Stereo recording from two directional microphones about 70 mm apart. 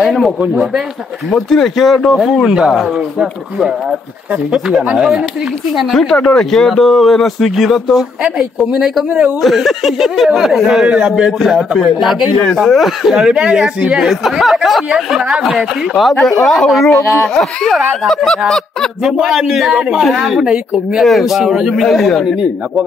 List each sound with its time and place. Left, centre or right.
0.0 s speech: centre
1.3 s speech: centre
4.5 s speech: centre
16.9 s speech: left
17.3 s speech: centre
19.0 s speech: centre